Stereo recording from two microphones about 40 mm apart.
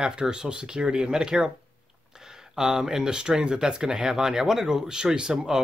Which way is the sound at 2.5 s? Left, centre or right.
Centre.